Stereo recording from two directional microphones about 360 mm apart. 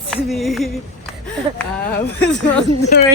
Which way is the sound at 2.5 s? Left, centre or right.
Centre.